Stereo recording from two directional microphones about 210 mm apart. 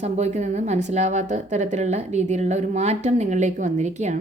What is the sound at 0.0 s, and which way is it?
Speech, 30° right (ahead or behind).